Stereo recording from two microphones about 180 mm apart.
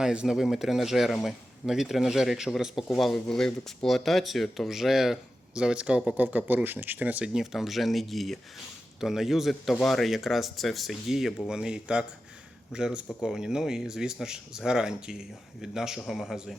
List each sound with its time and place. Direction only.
0.0 s a man's voice: 5° right (ahead or behind)